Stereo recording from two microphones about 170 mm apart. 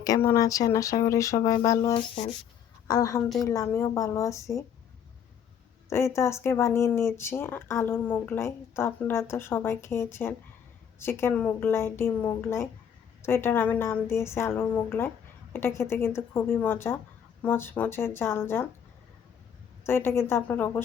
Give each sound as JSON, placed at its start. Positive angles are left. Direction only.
{"t": 0.0, "sound": "a woman's voice", "side_deg": 20}
{"t": 5.9, "sound": "speech", "side_deg": 15}
{"t": 19.8, "sound": "speech", "side_deg": 15}